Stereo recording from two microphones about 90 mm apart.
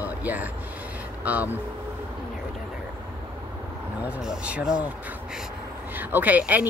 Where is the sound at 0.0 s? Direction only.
20° right (ahead or behind).